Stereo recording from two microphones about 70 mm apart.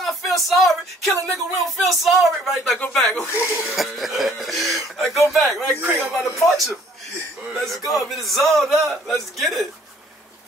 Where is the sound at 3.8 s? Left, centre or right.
Centre.